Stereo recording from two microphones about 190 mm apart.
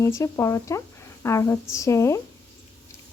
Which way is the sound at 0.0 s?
15° left (ahead or behind).